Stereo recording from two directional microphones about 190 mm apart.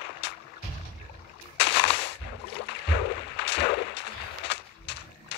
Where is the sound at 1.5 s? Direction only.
65° left (ahead or behind).